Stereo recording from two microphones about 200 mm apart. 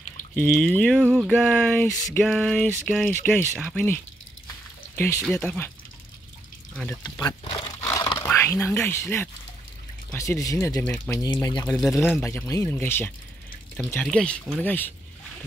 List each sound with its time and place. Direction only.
0.4 s speech: 10° left (ahead or behind)
1.4 s a sound: 5° left (ahead or behind)
3.3 s speech: 5° left (ahead or behind)
6.7 s speech: 5° left (ahead or behind)
7.0 s crumpling: 20° left (ahead or behind)
8.7 s speech: 10° left (ahead or behind)